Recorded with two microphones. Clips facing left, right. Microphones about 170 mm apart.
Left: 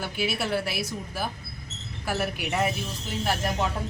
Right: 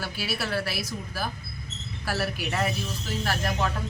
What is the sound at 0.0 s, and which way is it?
Speech, 20° left (ahead or behind).